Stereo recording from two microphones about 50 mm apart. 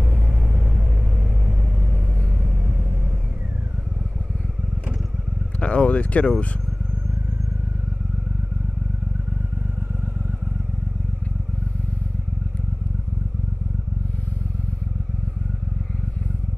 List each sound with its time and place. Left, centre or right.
0.1 s vehicle: right
5.6 s speech: left